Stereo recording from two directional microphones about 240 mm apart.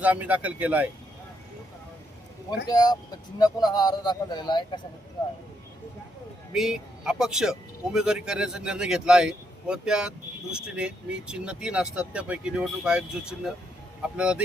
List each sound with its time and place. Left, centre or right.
0.0 s speech: centre
2.6 s speech: centre
6.5 s speech: centre